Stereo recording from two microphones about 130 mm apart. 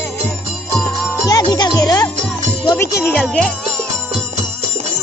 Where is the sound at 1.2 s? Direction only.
30° left (ahead or behind); by 3.5 s 10° left (ahead or behind).